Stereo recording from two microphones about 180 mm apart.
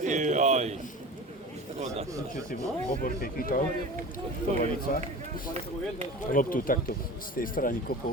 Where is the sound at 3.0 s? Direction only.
55° left (ahead or behind).